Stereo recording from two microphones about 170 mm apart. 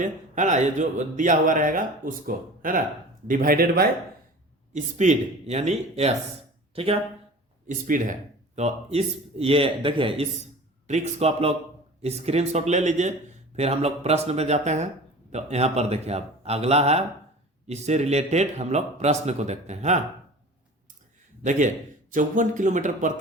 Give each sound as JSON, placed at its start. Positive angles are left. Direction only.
{"t": 0.0, "sound": "speech", "side_deg": -45}
{"t": 4.7, "sound": "a man's voice", "side_deg": -45}
{"t": 7.7, "sound": "speech", "side_deg": -50}
{"t": 8.5, "sound": "a man's voice", "side_deg": -40}
{"t": 22.1, "sound": "speech", "side_deg": -50}